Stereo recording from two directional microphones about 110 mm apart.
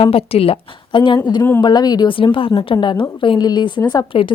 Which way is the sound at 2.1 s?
50° left (ahead or behind).